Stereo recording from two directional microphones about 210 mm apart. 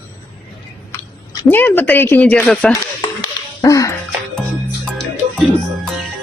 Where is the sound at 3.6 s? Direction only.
15° left (ahead or behind).